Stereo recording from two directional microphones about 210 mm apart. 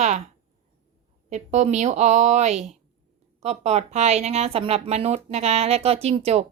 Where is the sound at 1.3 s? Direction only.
35° right (ahead or behind).